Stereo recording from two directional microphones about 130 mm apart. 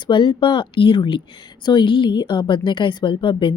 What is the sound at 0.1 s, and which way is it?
A woman's voice, 40° left (ahead or behind).